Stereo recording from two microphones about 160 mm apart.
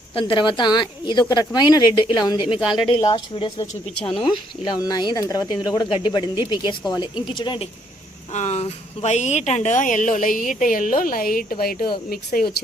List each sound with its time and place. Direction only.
0.1 s speech: 30° left (ahead or behind)
8.3 s speech: 45° left (ahead or behind); by 12.6 s 65° left (ahead or behind)